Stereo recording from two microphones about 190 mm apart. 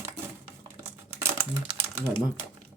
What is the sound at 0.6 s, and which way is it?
Crumpling, 15° right (ahead or behind).